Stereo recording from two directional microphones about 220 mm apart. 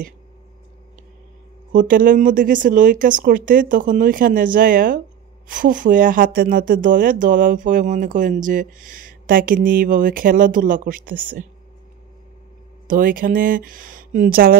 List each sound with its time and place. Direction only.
1.7 s speech: 35° right (ahead or behind)
12.8 s speech: 40° right (ahead or behind)